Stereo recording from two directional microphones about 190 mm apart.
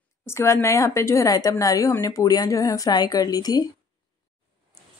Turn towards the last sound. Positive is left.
turn(degrees=20)  # may be behind; listen again after turning